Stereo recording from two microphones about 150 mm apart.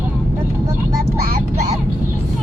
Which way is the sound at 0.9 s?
70° right (ahead or behind).